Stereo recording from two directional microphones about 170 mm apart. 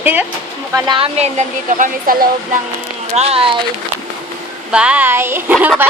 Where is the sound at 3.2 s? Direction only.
35° right (ahead or behind).